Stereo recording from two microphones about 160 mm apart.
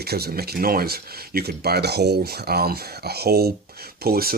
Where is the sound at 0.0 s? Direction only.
80° right.